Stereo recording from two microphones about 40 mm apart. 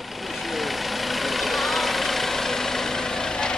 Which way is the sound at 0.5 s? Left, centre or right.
Centre.